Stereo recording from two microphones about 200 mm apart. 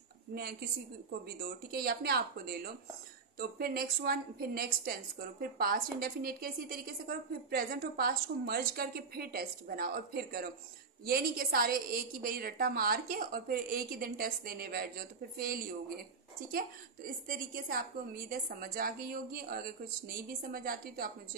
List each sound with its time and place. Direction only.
0.3 s a woman's voice: 50° right (ahead or behind)
17.0 s a woman's voice: 45° right (ahead or behind)